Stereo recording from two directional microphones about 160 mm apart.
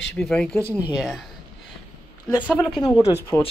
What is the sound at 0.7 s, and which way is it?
Speech, 10° right (ahead or behind).